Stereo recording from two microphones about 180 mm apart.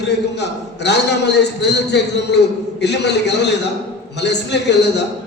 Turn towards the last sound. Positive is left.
turn(degrees=70)  # may be behind; listen again after turning